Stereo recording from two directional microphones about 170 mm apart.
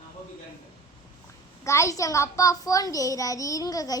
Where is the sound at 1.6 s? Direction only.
20° left (ahead or behind).